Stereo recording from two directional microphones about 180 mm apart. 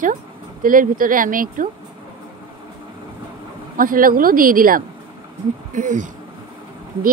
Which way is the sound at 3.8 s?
50° right (ahead or behind).